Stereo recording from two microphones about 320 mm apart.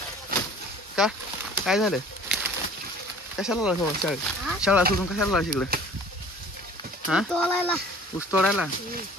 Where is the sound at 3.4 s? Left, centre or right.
Centre.